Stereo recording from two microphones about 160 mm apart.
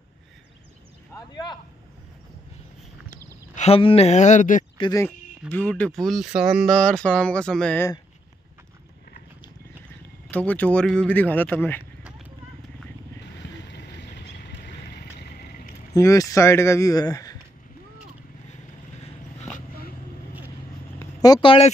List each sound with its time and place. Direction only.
1.1 s speech: 25° left (ahead or behind)
3.5 s speech: 40° left (ahead or behind)
5.5 s speech: 10° left (ahead or behind)
10.3 s speech: 10° left (ahead or behind)
13.7 s vehicle: 90° left
15.9 s speech: 20° left (ahead or behind)
21.0 s speech: 25° left (ahead or behind)